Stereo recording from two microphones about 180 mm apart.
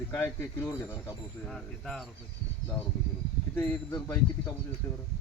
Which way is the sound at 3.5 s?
10° left (ahead or behind).